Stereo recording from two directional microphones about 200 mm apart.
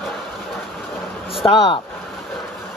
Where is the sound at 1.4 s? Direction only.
20° left (ahead or behind).